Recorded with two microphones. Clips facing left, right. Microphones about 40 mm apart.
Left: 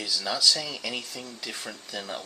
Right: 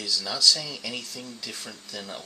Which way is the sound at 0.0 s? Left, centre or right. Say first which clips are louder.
Right 1 dB; centre.